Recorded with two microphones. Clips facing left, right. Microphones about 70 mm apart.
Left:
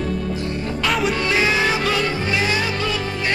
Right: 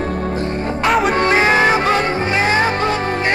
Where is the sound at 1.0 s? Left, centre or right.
Right.